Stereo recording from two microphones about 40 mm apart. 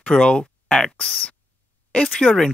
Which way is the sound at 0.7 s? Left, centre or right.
Centre.